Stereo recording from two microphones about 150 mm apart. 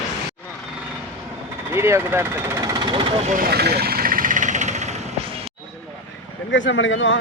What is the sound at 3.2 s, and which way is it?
Vehicle, 65° right (ahead or behind).